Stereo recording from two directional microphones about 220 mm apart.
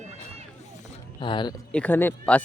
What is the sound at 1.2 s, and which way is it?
Speech, 20° left (ahead or behind).